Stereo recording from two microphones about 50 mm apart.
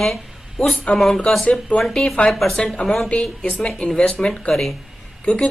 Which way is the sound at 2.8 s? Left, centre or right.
Left.